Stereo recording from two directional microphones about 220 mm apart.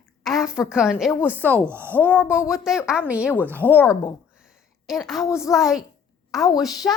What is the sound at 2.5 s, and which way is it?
Speech, 5° right (ahead or behind).